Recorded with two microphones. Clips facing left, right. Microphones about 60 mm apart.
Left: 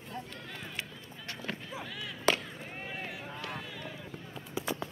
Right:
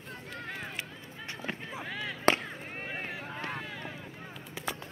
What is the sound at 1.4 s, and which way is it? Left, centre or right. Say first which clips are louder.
Chop: right 1 dB; right.